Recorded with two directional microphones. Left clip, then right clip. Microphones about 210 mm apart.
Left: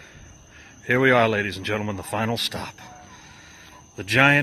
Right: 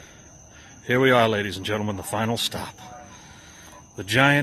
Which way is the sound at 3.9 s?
Centre (ahead or behind).